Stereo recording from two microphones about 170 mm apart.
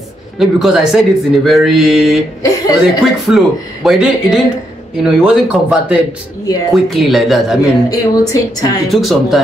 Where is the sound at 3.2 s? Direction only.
Centre (ahead or behind).